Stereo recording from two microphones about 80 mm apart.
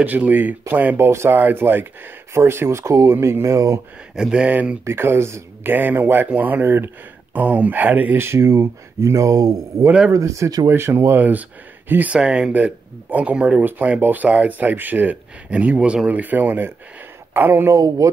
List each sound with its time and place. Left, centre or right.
0.0 s speech: right
0.9 s speech: right
4.1 s speech: centre
4.8 s speech: right
10.7 s speech: right
17.7 s a sound: right